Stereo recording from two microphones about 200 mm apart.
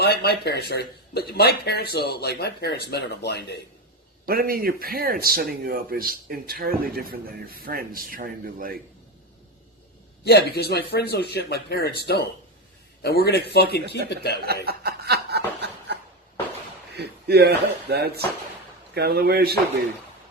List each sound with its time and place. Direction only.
0.0 s speech: 50° left (ahead or behind)
4.3 s a man's voice: 50° right (ahead or behind)
10.2 s speech: 55° left (ahead or behind)
14.4 s chuckle: 50° right (ahead or behind)
16.9 s a man's voice: 55° right (ahead or behind)